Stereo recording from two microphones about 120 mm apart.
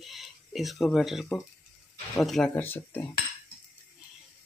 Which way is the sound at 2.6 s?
15° left (ahead or behind).